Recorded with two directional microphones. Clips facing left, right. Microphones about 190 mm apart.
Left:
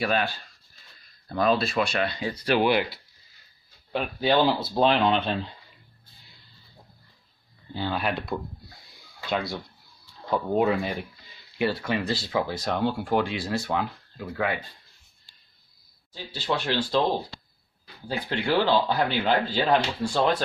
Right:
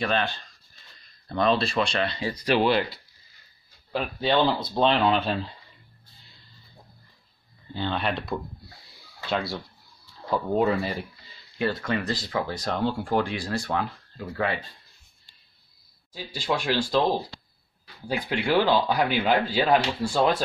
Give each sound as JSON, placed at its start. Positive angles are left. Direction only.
{"t": 0.0, "sound": "speech", "side_deg": 10}
{"t": 2.6, "sound": "speech", "side_deg": 10}
{"t": 7.7, "sound": "speech", "side_deg": 10}
{"t": 11.5, "sound": "speech", "side_deg": 10}
{"t": 12.0, "sound": "speech", "side_deg": 25}
{"t": 13.7, "sound": "speech", "side_deg": 10}
{"t": 16.1, "sound": "speech", "side_deg": -10}
{"t": 18.0, "sound": "speech", "side_deg": -10}